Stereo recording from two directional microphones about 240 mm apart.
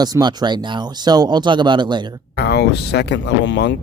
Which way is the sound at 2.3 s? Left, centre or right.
Left.